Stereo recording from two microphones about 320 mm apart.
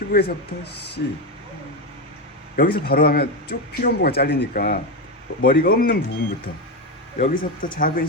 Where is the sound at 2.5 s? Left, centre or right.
Left.